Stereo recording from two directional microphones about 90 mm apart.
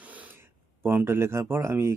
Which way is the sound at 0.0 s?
15° right (ahead or behind).